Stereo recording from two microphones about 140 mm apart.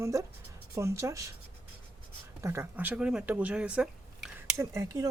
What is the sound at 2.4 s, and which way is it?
Speech, 20° right (ahead or behind).